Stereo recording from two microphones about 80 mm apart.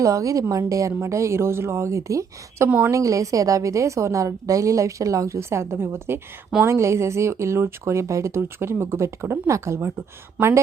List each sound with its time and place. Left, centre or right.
0.0 s a woman's voice: right